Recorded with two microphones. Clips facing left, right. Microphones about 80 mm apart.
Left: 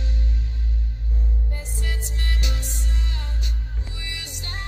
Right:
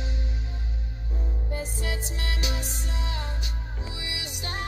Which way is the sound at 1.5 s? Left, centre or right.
Centre.